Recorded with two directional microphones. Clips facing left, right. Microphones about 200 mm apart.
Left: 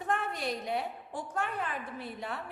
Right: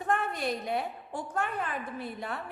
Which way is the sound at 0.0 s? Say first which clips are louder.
Right 3 dB; 50° right (ahead or behind).